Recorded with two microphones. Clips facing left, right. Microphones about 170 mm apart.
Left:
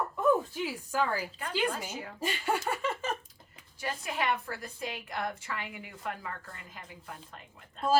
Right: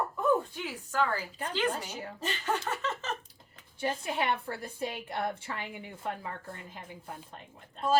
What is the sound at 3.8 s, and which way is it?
A woman's voice, 30° right (ahead or behind).